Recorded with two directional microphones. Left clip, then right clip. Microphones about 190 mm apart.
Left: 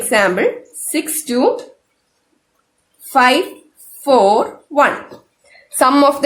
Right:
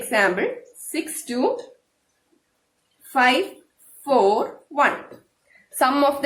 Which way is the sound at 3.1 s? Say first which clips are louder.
Left 6 dB; 40° left (ahead or behind).